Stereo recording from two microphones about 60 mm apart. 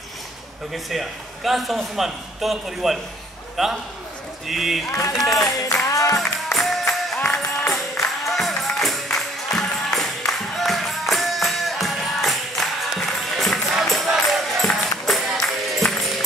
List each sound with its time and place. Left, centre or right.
0.8 s a man's voice: centre
5.9 s music: left
6.1 s music: centre